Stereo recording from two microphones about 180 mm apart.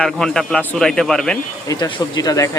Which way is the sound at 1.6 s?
20° left (ahead or behind).